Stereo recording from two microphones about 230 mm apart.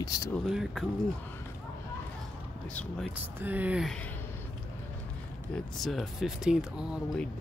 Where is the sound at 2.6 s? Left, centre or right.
Centre.